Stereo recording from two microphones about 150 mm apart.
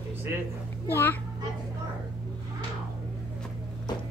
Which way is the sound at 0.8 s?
15° left (ahead or behind).